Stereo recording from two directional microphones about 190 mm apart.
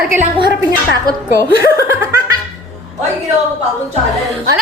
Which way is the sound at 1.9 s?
15° right (ahead or behind).